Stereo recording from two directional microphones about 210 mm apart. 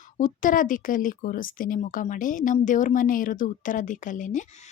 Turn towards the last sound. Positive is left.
turn(degrees=35)  # may be behind; listen again after turning